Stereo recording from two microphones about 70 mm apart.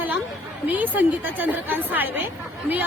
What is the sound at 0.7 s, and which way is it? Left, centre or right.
A woman's voice, right.